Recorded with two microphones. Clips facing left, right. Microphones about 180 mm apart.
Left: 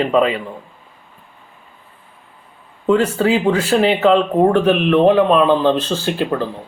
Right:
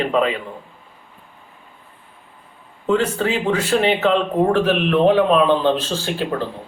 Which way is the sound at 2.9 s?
Centre (ahead or behind).